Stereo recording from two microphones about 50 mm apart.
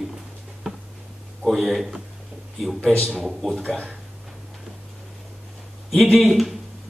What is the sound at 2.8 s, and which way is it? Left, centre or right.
Speech, centre.